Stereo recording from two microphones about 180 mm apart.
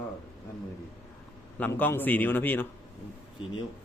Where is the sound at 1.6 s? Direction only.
10° left (ahead or behind).